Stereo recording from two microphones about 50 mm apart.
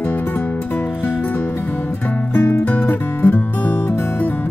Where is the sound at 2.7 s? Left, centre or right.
Left.